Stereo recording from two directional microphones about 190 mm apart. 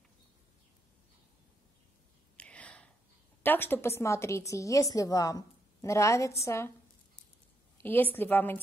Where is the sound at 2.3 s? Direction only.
5° left (ahead or behind).